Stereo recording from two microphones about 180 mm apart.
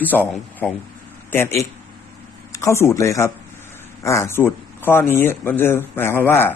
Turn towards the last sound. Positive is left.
turn(degrees=10)  # may be behind; listen again after turning